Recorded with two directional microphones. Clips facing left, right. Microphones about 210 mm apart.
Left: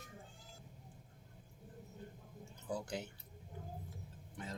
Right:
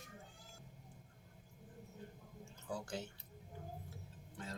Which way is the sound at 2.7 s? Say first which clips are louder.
Left 2 dB; 20° left (ahead or behind).